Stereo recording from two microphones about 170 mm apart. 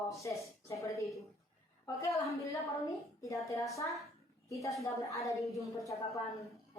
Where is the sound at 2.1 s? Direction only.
20° left (ahead or behind).